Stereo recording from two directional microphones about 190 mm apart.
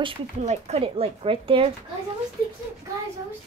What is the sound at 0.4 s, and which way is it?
Speech, 35° right (ahead or behind).